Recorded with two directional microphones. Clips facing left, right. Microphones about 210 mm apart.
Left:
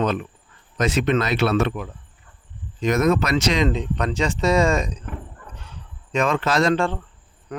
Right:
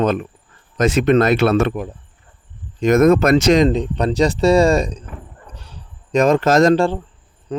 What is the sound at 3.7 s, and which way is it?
Speech, 35° right (ahead or behind).